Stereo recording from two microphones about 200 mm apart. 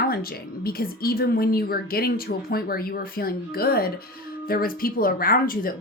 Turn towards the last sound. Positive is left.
turn(degrees=45)  # may be behind; listen again after turning